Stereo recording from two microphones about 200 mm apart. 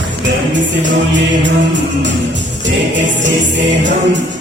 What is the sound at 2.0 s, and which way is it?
Music, 65° right (ahead or behind).